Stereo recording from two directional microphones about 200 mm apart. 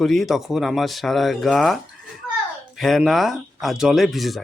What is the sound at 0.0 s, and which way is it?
Speech, centre (ahead or behind).